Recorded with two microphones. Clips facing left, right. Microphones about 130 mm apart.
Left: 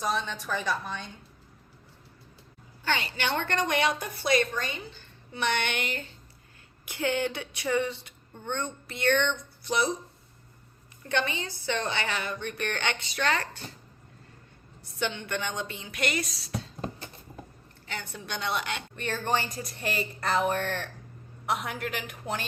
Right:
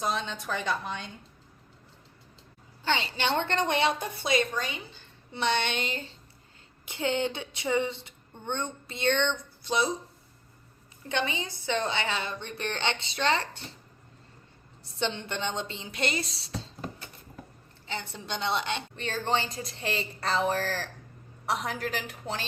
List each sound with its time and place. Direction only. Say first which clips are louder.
0.3 s a woman's voice: even; 20° right (ahead or behind)
2.8 s a woman's voice: right 1 dB; 25° right (ahead or behind)
11.1 s a woman's voice: left 1 dB; 20° right (ahead or behind)
14.8 s a woman's voice: even; 25° right (ahead or behind)
17.8 s a woman's voice: right 2 dB; 25° right (ahead or behind)